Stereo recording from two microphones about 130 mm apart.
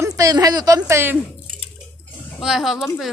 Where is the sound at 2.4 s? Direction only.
5° right (ahead or behind).